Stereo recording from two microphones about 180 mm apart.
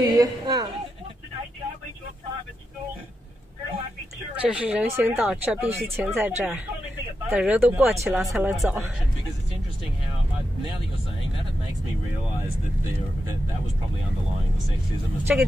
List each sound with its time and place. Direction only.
0.2 s a sound: 20° right (ahead or behind)
4.4 s speech: 5° right (ahead or behind)
8.2 s speech: centre (ahead or behind)
15.3 s speech: 5° right (ahead or behind)